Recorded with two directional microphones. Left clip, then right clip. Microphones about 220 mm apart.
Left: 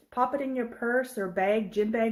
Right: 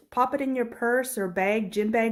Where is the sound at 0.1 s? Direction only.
35° right (ahead or behind).